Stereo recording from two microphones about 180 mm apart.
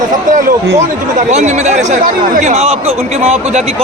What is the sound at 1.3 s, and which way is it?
A man's voice, 40° right (ahead or behind).